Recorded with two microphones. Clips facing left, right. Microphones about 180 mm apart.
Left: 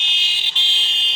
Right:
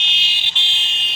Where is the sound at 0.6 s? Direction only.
35° left (ahead or behind).